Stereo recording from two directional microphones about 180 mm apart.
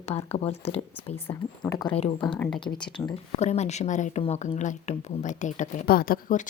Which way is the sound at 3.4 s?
40° left (ahead or behind).